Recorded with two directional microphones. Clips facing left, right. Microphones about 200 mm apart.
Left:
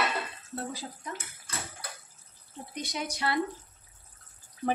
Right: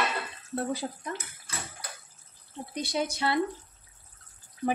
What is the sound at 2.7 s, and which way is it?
Speech, 30° right (ahead or behind).